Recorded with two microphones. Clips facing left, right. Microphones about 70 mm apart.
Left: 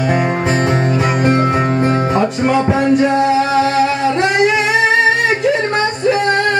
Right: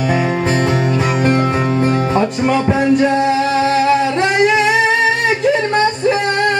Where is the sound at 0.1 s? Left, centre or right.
Left.